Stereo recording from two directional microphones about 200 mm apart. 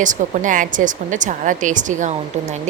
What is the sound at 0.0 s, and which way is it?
Speech, 40° right (ahead or behind).